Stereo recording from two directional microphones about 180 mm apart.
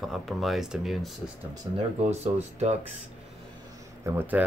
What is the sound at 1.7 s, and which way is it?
Speech, 20° right (ahead or behind).